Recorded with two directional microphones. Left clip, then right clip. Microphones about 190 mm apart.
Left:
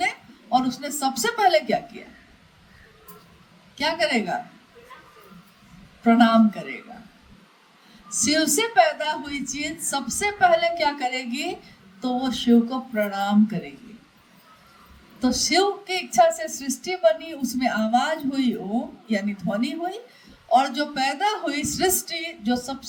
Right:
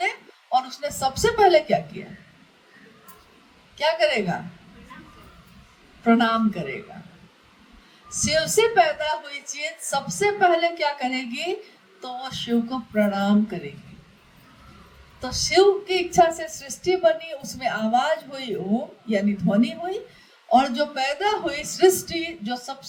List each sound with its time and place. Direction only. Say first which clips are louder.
0.0 s a woman's voice: left 1 dB; 30° left (ahead or behind)
3.8 s a woman's voice: right 2 dB; 30° left (ahead or behind)
6.0 s a woman's voice: left 2 dB; 35° left (ahead or behind)
8.2 s a woman's voice: right 2 dB; 30° left (ahead or behind)
15.2 s a woman's voice: right 2 dB; 30° left (ahead or behind)